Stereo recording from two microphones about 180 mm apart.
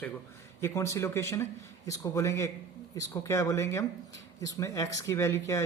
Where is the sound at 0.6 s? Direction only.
15° left (ahead or behind).